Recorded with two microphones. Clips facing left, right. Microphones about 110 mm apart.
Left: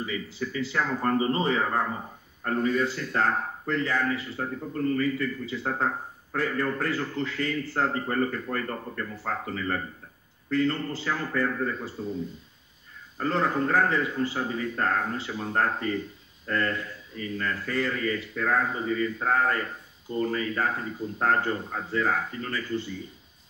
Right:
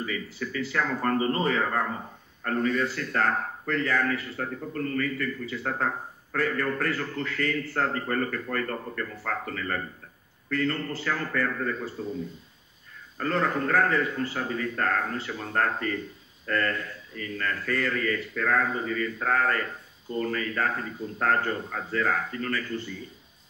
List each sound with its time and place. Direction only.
0.0 s a man's voice: 25° left (ahead or behind)
13.2 s a man's voice: 20° left (ahead or behind)